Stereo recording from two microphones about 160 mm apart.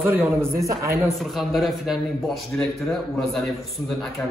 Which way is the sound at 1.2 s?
Centre (ahead or behind).